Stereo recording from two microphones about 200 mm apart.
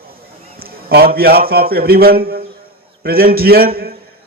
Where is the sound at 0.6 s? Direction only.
50° right (ahead or behind).